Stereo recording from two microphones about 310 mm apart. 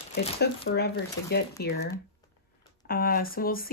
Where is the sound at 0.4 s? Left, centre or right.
Left.